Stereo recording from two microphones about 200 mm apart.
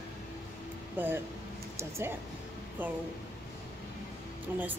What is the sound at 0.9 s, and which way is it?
A woman's voice, 10° right (ahead or behind).